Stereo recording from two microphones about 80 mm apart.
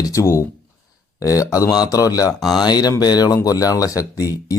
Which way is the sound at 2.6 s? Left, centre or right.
Left.